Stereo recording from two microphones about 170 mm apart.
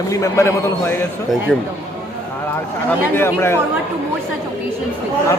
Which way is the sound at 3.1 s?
15° left (ahead or behind).